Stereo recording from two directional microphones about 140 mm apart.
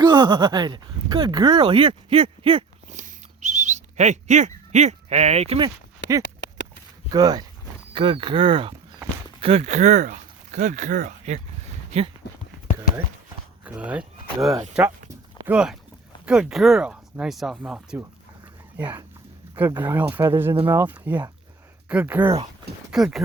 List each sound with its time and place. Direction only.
0.0 s speech: 30° right (ahead or behind)
2.9 s bird: 60° right (ahead or behind)
7.1 s speech: 30° right (ahead or behind); by 11.4 s 65° right (ahead or behind)
11.9 s speech: 45° right (ahead or behind)
13.7 s speech: 10° right (ahead or behind)
22.9 s speech: centre (ahead or behind)